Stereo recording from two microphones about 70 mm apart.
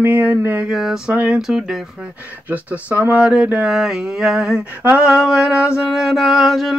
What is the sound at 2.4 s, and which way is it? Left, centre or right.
Speech, right.